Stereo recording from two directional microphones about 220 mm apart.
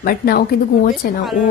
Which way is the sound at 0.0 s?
45° left (ahead or behind).